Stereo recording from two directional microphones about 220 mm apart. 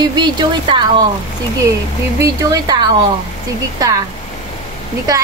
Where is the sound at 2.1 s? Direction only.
15° right (ahead or behind).